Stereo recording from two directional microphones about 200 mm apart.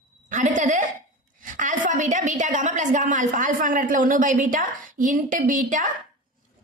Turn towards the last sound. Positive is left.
turn(degrees=-40)  # may be behind; listen again after turning